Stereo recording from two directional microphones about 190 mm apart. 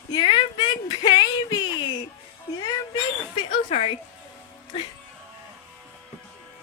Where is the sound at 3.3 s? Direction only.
30° left (ahead or behind).